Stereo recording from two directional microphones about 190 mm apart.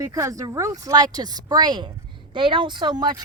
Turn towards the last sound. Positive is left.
turn(degrees=-20)  # may be behind; listen again after turning